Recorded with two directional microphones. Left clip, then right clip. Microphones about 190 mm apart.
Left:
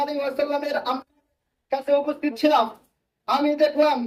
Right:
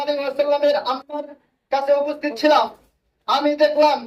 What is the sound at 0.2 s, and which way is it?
Speech, 55° left (ahead or behind).